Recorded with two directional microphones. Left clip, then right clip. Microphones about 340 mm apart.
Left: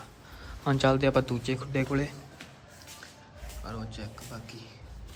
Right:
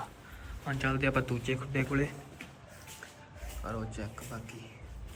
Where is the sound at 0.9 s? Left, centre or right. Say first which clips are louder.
Left 6 dB; centre.